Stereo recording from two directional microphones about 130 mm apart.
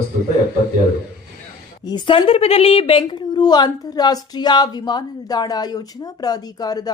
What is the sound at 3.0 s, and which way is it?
Speech, 35° left (ahead or behind).